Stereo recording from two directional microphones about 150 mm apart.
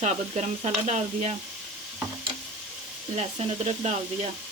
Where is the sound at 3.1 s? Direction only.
45° right (ahead or behind).